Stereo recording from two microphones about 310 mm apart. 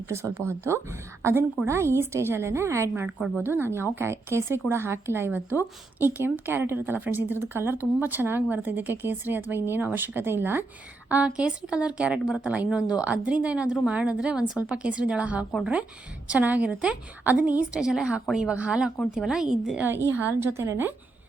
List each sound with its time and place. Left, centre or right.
0.1 s a woman's voice: centre